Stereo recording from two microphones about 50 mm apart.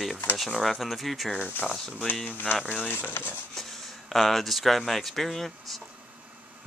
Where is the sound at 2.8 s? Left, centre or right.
Left.